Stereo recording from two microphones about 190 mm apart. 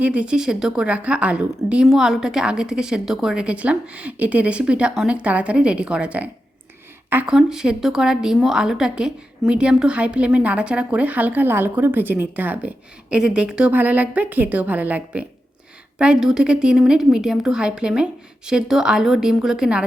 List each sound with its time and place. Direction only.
0.0 s a woman's voice: 5° right (ahead or behind)